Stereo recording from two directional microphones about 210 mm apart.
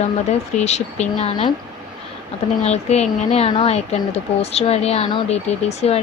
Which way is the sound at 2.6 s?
30° left (ahead or behind).